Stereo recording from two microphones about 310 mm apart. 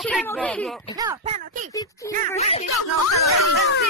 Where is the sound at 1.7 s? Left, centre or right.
Centre.